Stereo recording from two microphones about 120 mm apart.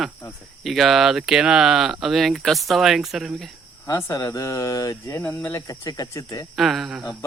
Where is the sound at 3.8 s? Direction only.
30° left (ahead or behind).